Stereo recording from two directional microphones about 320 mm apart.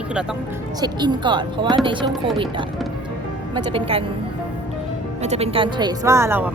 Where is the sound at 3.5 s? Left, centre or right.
Centre.